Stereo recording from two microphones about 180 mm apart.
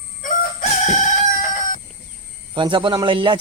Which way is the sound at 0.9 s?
45° left (ahead or behind).